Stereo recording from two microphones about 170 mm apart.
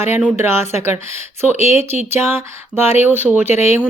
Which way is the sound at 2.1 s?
15° right (ahead or behind).